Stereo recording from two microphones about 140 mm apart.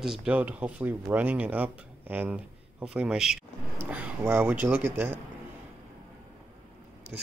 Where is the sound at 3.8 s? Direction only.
10° right (ahead or behind).